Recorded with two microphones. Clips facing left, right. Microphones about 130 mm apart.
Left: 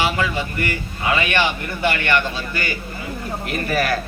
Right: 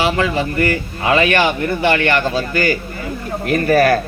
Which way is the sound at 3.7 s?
30° right (ahead or behind).